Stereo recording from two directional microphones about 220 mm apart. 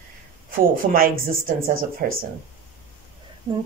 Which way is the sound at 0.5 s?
40° right (ahead or behind).